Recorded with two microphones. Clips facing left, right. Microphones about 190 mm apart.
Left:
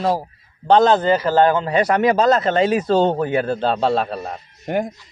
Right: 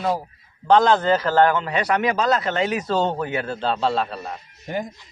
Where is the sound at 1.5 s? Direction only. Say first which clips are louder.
Left 5 dB; 30° left (ahead or behind); by 2.5 s 45° left (ahead or behind).